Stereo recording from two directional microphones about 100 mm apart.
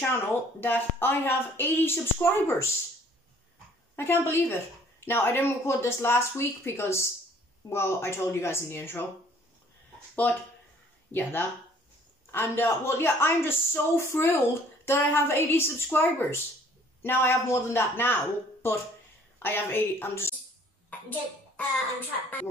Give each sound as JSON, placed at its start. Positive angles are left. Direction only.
{"t": 0.1, "sound": "a man's voice", "side_deg": 20}
{"t": 3.9, "sound": "a man's voice", "side_deg": 25}
{"t": 10.2, "sound": "a man's voice", "side_deg": 15}
{"t": 20.9, "sound": "hands", "side_deg": 20}